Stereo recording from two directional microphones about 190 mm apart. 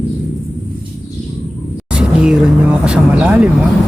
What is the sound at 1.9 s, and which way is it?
Speech, 5° right (ahead or behind).